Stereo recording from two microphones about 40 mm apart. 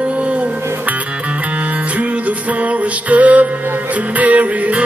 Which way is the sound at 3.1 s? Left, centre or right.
Right.